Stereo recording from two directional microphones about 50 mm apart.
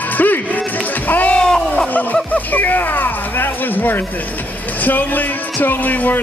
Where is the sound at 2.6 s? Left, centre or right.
Left.